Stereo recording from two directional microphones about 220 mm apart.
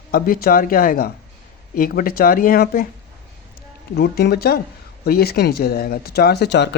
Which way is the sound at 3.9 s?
45° left (ahead or behind).